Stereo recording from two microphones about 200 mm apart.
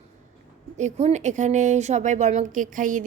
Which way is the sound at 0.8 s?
35° right (ahead or behind).